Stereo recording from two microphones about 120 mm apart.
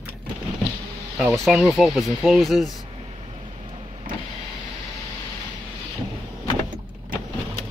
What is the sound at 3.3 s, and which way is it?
Vehicle, 45° right (ahead or behind).